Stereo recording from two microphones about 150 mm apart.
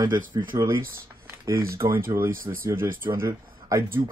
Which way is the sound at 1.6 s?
75° right (ahead or behind).